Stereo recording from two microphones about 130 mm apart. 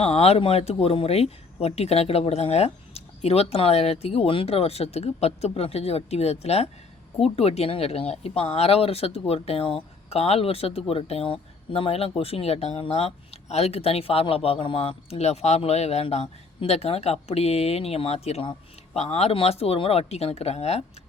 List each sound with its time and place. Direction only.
0.0 s speech: 50° left (ahead or behind)